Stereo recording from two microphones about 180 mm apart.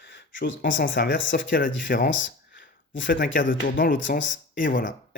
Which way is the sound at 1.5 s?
50° left (ahead or behind).